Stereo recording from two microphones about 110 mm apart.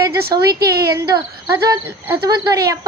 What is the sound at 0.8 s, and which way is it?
A woman's voice, 30° right (ahead or behind).